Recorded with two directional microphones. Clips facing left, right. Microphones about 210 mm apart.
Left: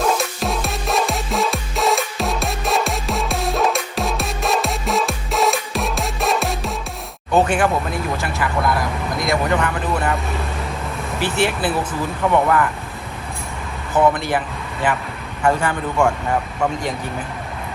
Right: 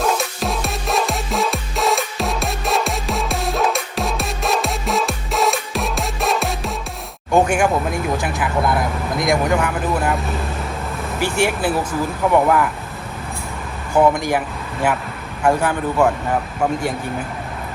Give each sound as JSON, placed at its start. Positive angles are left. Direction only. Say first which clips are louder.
{"t": 0.0, "sound": "music", "louder": "even", "side_deg": 0}
{"t": 7.3, "sound": "a sound", "louder": "right 1 dB", "side_deg": -10}
{"t": 8.2, "sound": "speech", "louder": "right 1 dB", "side_deg": -15}
{"t": 11.2, "sound": "speech", "louder": "right 1 dB", "side_deg": -10}
{"t": 13.9, "sound": "speech", "louder": "right 2 dB", "side_deg": -15}
{"t": 15.4, "sound": "speech", "louder": "right 2 dB", "side_deg": -5}